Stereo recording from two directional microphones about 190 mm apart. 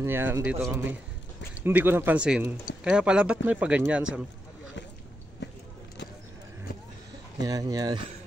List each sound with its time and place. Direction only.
0.0 s speech: 10° right (ahead or behind)
7.4 s speech: 20° right (ahead or behind)